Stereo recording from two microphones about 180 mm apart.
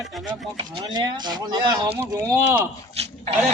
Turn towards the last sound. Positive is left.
turn(degrees=-35)  # may be behind; listen again after turning